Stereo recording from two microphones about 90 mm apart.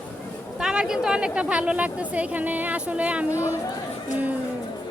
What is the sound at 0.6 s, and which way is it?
A woman's voice, 10° right (ahead or behind).